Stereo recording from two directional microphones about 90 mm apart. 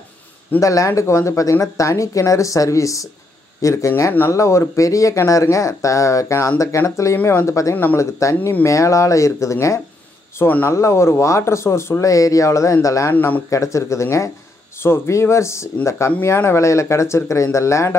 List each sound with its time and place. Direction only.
0.6 s speech: 35° left (ahead or behind)
7.7 s speech: 20° left (ahead or behind)
8.0 s speech: 35° left (ahead or behind)
13.1 s speech: 20° left (ahead or behind)
13.5 s speech: 35° left (ahead or behind)